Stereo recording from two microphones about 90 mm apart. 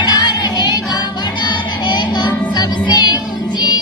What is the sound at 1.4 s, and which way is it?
Child singing, 55° left (ahead or behind).